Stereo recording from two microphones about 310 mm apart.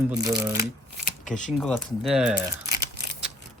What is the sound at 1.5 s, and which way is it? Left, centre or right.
Speech, centre.